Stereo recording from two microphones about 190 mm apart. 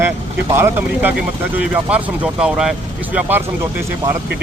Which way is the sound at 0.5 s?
10° right (ahead or behind).